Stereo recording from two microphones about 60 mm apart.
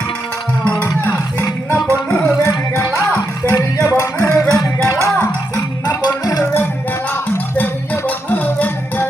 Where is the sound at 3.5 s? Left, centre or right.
Left.